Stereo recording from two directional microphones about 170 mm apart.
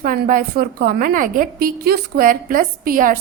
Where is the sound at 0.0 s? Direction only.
55° right (ahead or behind).